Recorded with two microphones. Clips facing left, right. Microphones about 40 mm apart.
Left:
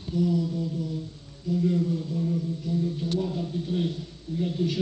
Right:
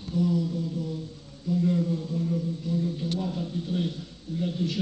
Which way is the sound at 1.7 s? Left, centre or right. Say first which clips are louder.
Even; right.